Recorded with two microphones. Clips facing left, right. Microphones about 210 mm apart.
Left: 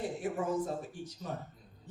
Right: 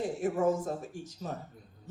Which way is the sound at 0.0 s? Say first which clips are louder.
Right 6 dB; 45° right (ahead or behind).